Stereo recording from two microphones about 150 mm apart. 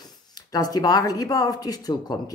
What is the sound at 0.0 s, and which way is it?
Speech, 25° left (ahead or behind).